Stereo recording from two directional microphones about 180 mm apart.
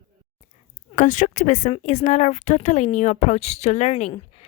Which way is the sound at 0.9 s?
45° left (ahead or behind).